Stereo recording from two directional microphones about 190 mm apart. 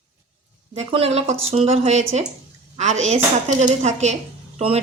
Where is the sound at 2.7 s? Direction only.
40° right (ahead or behind).